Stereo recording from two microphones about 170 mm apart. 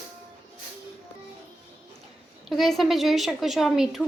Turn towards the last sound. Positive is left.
turn(degrees=0)  # may be behind; listen again after turning